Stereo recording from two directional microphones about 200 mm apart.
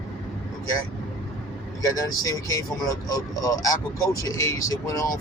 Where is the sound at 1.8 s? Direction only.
15° left (ahead or behind).